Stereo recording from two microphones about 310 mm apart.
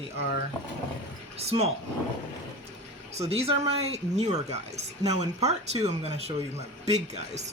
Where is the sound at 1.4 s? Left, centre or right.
Centre.